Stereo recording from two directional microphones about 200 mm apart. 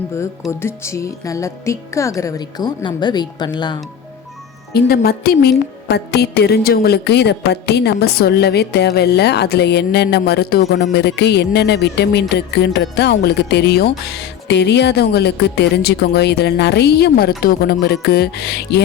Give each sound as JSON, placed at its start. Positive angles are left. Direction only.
{"t": 0.6, "sound": "a woman's voice", "side_deg": 15}
{"t": 4.7, "sound": "a woman's voice", "side_deg": 50}